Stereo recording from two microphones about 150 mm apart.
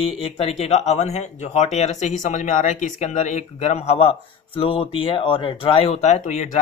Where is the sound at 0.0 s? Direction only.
40° left (ahead or behind).